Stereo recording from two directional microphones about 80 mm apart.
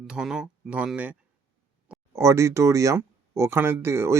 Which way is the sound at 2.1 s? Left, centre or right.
Right.